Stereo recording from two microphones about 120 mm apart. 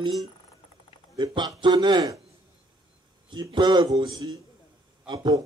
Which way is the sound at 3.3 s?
40° right (ahead or behind).